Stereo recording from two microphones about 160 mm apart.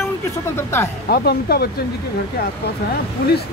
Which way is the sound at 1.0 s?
75° left (ahead or behind).